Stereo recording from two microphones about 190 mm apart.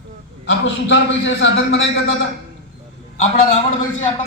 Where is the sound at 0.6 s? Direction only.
70° left (ahead or behind).